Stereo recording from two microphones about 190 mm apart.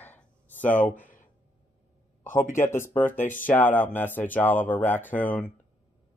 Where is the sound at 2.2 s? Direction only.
45° left (ahead or behind).